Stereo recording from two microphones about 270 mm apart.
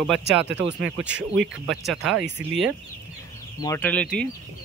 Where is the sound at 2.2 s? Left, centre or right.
Right.